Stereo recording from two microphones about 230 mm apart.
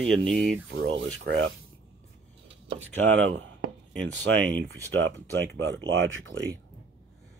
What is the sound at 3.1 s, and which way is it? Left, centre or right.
Speech, right.